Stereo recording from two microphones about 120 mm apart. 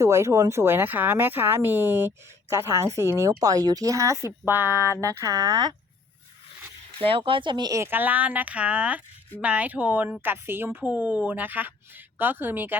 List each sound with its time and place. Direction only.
0.0 s speech: 25° right (ahead or behind)
4.7 s a sound: 25° left (ahead or behind)
4.9 s speech: 25° right (ahead or behind)
7.0 s speech: 50° right (ahead or behind)
7.8 s speech: 15° right (ahead or behind)